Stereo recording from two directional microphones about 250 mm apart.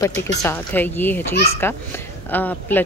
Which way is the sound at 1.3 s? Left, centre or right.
Left.